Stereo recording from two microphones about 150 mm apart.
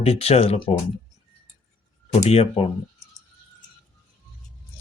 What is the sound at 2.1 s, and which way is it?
Speech, 45° left (ahead or behind).